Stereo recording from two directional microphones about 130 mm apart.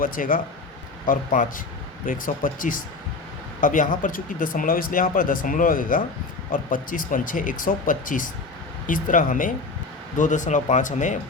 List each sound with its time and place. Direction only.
0.0 s speech: 90° left
10.2 s speech: 70° left (ahead or behind)